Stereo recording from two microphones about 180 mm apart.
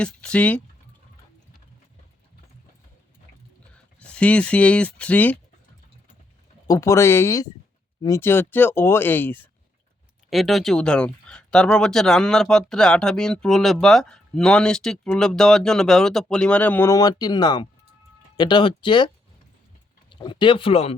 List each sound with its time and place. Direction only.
0.0 s speech: 5° left (ahead or behind)
4.0 s speech: 5° left (ahead or behind)
6.7 s speech: 15° left (ahead or behind)
10.2 s speech: centre (ahead or behind); by 20.9 s 30° left (ahead or behind)